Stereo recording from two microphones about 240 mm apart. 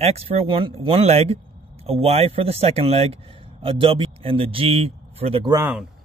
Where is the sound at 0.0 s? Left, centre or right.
Right; by 5.9 s centre.